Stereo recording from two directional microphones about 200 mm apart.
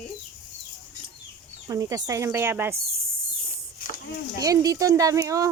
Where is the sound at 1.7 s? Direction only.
15° right (ahead or behind).